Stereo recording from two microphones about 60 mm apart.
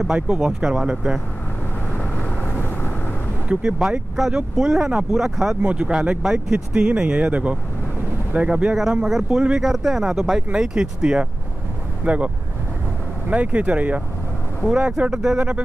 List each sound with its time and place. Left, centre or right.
0.3 s speech: centre
2.0 s vehicle: left
3.4 s speech: centre
5.6 s speech: right
13.3 s speech: right